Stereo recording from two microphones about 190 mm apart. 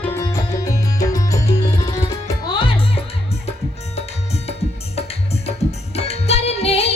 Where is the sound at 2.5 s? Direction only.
30° left (ahead or behind).